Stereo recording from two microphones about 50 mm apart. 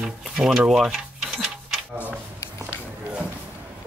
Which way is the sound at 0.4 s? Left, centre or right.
Centre.